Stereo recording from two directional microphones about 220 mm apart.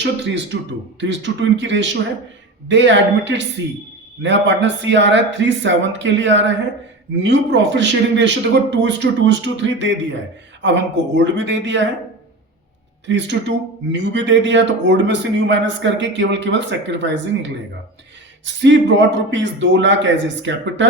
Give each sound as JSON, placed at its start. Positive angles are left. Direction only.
{"t": 0.0, "sound": "a man's voice", "side_deg": -55}
{"t": 13.1, "sound": "a man's voice", "side_deg": -55}